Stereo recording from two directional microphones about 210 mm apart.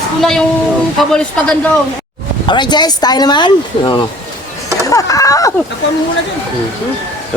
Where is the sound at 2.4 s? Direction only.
20° left (ahead or behind).